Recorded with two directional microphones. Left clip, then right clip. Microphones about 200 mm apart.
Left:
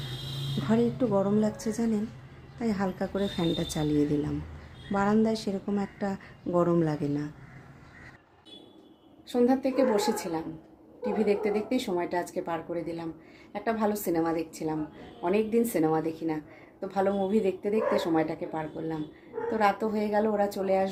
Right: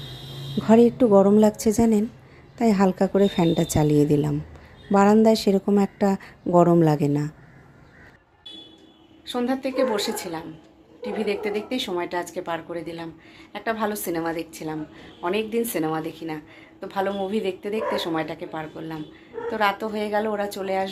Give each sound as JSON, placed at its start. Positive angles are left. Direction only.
{"t": 0.7, "sound": "a woman's voice", "side_deg": -35}
{"t": 9.2, "sound": "speech", "side_deg": 5}